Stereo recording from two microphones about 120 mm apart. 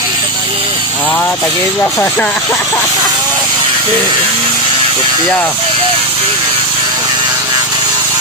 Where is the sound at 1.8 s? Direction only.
20° left (ahead or behind).